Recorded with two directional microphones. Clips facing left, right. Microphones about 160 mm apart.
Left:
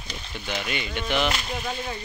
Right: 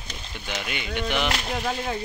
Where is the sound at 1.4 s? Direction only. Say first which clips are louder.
Right 3 dB; 65° right (ahead or behind).